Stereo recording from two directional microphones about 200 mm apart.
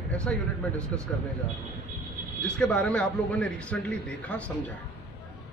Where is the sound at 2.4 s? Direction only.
5° left (ahead or behind).